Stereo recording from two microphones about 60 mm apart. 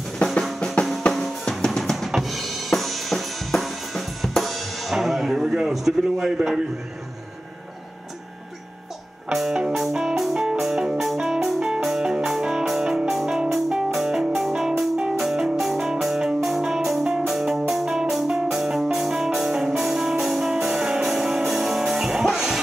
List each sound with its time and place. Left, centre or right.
0.2 s drum: centre
2.0 s drum kit: centre
9.3 s music: centre
9.8 s music: centre